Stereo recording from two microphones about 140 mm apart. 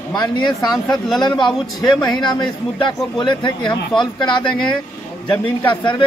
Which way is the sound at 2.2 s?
35° left (ahead or behind).